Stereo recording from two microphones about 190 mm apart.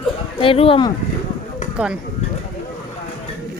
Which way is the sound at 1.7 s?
5° right (ahead or behind).